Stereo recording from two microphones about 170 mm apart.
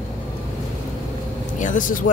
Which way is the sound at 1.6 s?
50° left (ahead or behind).